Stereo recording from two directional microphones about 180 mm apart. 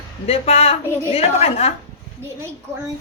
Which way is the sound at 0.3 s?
35° left (ahead or behind).